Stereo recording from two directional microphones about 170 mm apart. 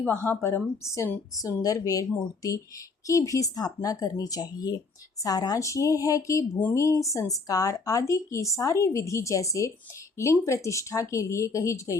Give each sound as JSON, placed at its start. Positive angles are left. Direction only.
{"t": 0.0, "sound": "a woman's voice", "side_deg": 10}